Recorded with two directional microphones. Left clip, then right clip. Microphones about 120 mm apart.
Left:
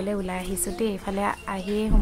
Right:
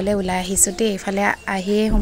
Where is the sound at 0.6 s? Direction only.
30° right (ahead or behind).